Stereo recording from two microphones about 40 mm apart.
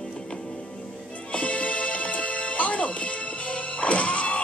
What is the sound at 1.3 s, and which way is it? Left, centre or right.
Music, left.